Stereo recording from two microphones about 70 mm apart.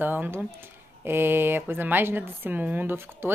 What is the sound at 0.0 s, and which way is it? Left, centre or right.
Speech, right.